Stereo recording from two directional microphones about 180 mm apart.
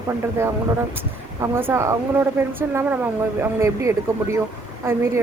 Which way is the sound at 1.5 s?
15° right (ahead or behind).